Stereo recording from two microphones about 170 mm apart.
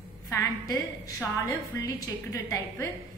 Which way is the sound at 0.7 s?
20° left (ahead or behind).